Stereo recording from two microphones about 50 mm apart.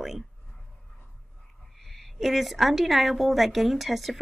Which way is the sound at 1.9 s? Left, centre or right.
Centre.